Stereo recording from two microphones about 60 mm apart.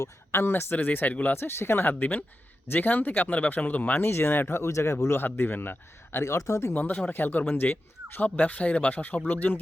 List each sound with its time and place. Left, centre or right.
0.3 s speech: left
1.9 s speech: left
5.2 s speech: left
6.3 s speech: left
7.0 s speech: left